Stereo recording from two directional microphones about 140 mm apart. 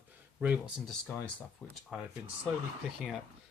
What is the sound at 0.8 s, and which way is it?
Speech, 5° left (ahead or behind).